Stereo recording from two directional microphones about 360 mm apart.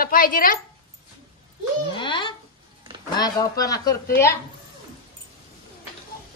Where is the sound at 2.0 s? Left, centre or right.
Centre.